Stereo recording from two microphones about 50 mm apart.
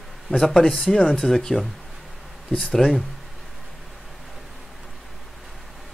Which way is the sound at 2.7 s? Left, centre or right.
Centre.